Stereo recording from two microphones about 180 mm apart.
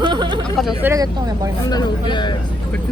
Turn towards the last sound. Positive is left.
turn(degrees=25)  # may be behind; listen again after turning